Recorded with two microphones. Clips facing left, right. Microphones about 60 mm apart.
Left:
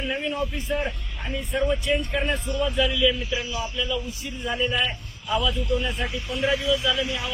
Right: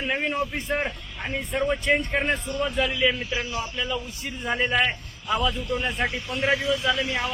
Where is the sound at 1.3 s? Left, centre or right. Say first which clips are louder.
Left 1 dB; right.